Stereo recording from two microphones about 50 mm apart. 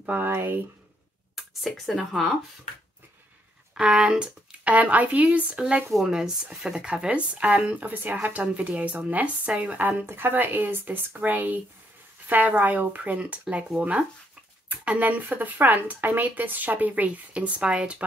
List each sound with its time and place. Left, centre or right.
0.0 s speech: right
0.3 s speech: right
1.3 s a sound: centre
2.0 s speech: centre
3.8 s speech: right
4.7 s speech: right
6.0 s speech: centre
6.9 s speech: right
14.9 s speech: right